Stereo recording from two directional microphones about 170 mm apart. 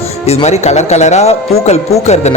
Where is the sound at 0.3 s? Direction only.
40° left (ahead or behind).